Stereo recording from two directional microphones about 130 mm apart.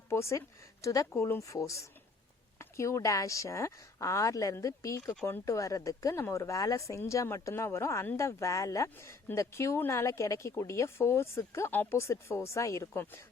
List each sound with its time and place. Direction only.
0.1 s speech: 20° left (ahead or behind)